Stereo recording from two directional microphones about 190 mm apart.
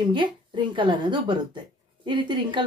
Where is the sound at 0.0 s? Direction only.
25° right (ahead or behind).